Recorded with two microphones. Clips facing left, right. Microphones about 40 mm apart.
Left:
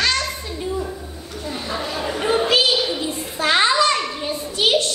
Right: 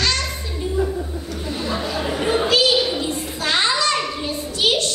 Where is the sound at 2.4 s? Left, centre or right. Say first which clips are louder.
Right 1 dB; centre.